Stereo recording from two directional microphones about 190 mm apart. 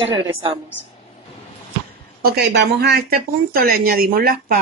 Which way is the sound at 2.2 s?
60° right (ahead or behind).